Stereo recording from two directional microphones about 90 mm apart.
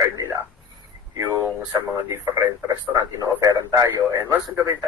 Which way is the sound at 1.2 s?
35° right (ahead or behind).